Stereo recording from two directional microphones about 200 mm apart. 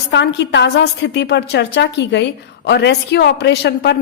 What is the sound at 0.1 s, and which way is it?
A woman's voice, 60° left (ahead or behind).